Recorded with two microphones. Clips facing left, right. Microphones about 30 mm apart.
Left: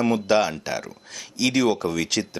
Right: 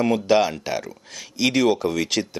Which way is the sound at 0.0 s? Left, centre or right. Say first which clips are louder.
Right 2 dB; centre.